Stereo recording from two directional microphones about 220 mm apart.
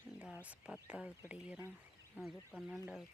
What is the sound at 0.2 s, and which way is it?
Speech, 5° right (ahead or behind).